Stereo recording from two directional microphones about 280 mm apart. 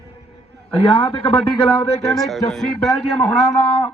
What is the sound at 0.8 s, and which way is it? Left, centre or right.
Speech, centre.